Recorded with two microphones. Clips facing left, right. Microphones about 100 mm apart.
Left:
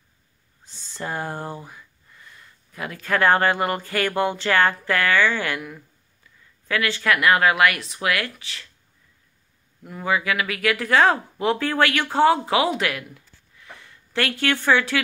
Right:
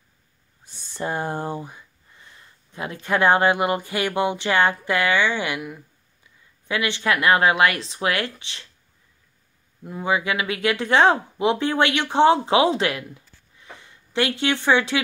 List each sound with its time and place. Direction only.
0.7 s speech: 20° right (ahead or behind)
9.8 s speech: 20° right (ahead or behind)